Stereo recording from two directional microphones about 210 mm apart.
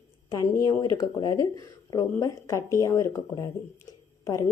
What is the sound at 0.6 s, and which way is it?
A woman's voice, 15° left (ahead or behind).